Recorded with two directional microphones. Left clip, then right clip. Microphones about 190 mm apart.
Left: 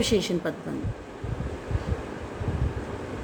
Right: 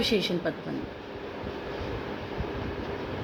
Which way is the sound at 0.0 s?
30° left (ahead or behind).